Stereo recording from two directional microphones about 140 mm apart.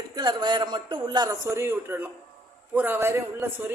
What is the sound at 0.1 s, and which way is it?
A man's voice, 30° right (ahead or behind).